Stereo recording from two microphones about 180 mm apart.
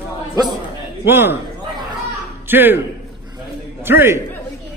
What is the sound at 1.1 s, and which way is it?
Speech, 15° right (ahead or behind).